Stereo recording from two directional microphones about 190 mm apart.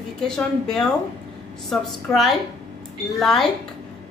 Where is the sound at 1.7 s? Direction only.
Centre (ahead or behind).